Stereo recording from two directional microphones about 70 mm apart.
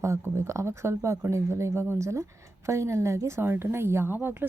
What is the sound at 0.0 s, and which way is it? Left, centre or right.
A woman's voice, right.